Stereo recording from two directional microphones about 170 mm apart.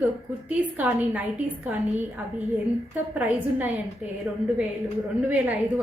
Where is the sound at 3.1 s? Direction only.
10° right (ahead or behind).